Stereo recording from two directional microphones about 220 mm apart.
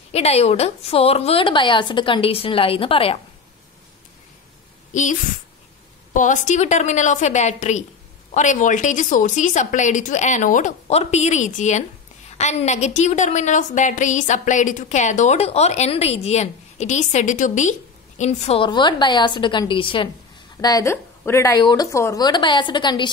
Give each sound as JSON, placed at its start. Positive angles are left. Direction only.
{"t": 0.1, "sound": "a woman's voice", "side_deg": 30}
{"t": 6.1, "sound": "a woman's voice", "side_deg": 35}